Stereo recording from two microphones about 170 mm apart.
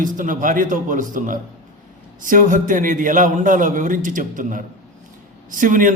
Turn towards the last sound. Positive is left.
turn(degrees=-50)  # may be behind; listen again after turning